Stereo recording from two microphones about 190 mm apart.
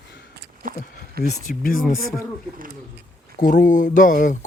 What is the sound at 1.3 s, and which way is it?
Speech, 45° left (ahead or behind).